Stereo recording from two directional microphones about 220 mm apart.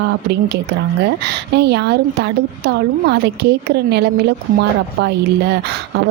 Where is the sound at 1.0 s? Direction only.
50° right (ahead or behind).